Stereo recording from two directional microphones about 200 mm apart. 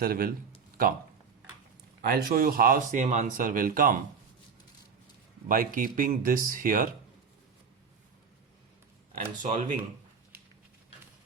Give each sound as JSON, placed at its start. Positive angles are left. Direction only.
{"t": 0.0, "sound": "speech", "side_deg": -50}
{"t": 2.0, "sound": "speech", "side_deg": -50}
{"t": 5.5, "sound": "speech", "side_deg": -45}
{"t": 9.1, "sound": "speech", "side_deg": -40}